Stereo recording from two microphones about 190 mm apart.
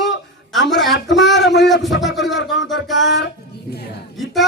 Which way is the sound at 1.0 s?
65° left (ahead or behind).